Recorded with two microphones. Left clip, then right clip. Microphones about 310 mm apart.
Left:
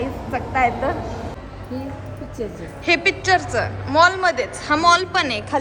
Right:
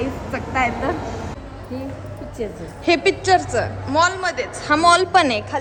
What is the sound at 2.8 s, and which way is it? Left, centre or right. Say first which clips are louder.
A woman's voice: even; centre.